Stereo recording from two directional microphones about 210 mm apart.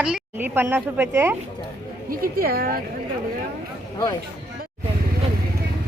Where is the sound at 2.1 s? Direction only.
45° right (ahead or behind).